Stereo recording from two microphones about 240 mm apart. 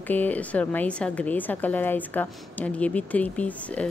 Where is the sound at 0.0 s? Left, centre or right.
Centre.